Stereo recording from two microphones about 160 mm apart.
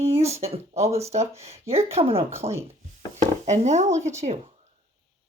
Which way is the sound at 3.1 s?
45° right (ahead or behind).